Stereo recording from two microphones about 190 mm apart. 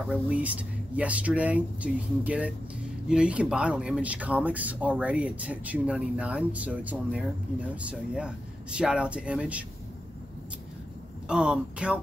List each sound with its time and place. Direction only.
0.0 s speech: 5° right (ahead or behind)
11.2 s speech: 5° right (ahead or behind)